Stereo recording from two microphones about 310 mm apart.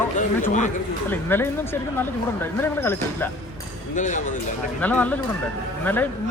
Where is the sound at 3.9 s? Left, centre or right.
Left.